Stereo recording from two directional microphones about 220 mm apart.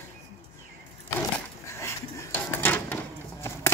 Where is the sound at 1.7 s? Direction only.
10° left (ahead or behind).